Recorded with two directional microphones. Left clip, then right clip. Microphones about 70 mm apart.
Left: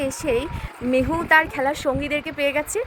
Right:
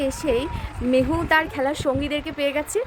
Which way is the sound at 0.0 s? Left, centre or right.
Left.